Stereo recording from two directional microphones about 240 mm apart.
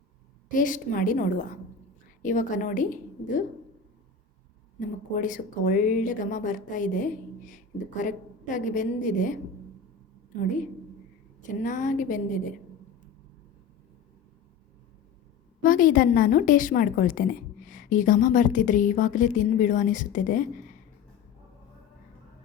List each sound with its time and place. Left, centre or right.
0.5 s a woman's voice: left
5.1 s a woman's voice: left
11.4 s a woman's voice: left
15.6 s a woman's voice: left